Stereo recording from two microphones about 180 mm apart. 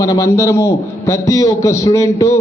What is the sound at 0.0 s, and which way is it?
A man's voice, 20° left (ahead or behind).